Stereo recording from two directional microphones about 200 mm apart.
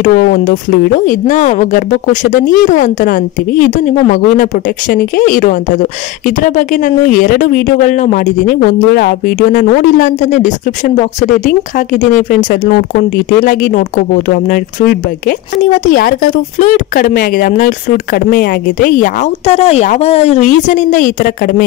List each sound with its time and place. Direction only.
0.0 s speech: 40° left (ahead or behind)